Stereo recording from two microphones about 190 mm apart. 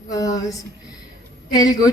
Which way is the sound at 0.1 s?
20° left (ahead or behind).